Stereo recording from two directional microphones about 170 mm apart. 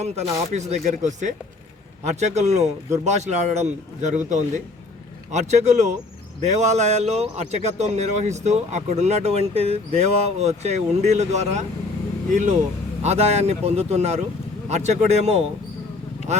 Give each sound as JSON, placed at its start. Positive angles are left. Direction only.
{"t": 0.0, "sound": "a man's voice", "side_deg": -40}